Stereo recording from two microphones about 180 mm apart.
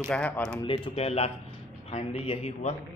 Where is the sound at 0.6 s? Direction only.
30° left (ahead or behind).